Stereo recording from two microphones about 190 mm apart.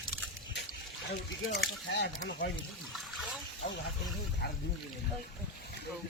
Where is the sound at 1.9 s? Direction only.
60° left (ahead or behind).